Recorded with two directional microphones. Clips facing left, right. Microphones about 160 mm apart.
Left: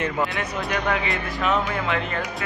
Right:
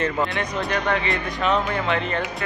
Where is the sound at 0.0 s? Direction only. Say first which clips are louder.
Right 1 dB; 5° left (ahead or behind).